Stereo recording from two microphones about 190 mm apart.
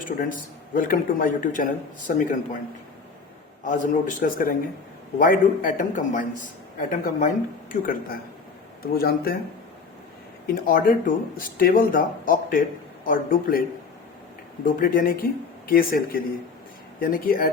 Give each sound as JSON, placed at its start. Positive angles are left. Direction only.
{"t": 0.7, "sound": "speech", "side_deg": 45}
{"t": 3.6, "sound": "speech", "side_deg": 45}
{"t": 10.4, "sound": "speech", "side_deg": 50}
{"t": 14.6, "sound": "speech", "side_deg": 50}